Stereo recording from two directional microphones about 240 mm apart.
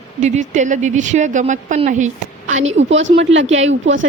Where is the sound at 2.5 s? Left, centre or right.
Right.